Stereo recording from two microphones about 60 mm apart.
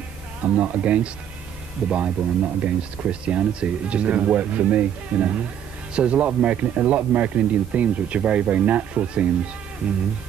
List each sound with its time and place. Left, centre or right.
0.4 s speech: right